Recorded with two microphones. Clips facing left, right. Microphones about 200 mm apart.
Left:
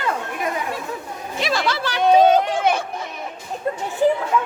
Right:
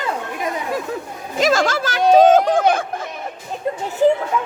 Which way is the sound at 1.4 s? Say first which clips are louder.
Right 6 dB; 45° right (ahead or behind).